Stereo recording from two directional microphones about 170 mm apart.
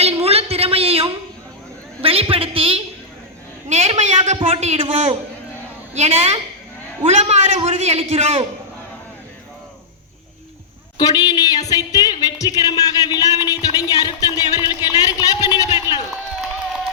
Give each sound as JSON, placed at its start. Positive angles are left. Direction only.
{"t": 0.0, "sound": "a sound", "side_deg": -35}
{"t": 2.0, "sound": "a man's voice", "side_deg": -35}
{"t": 10.9, "sound": "speech", "side_deg": 20}